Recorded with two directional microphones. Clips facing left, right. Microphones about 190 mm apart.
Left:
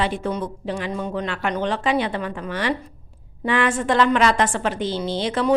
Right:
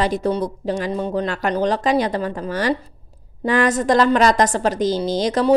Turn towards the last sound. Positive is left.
turn(degrees=-40)  # may be behind; listen again after turning